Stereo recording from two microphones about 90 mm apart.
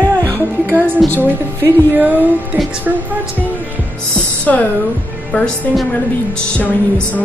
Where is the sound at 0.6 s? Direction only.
20° right (ahead or behind).